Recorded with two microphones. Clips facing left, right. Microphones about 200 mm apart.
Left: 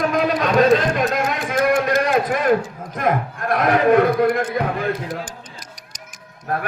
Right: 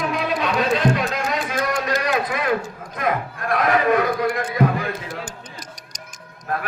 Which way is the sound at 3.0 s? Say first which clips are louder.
Left 3 dB; 50° left (ahead or behind).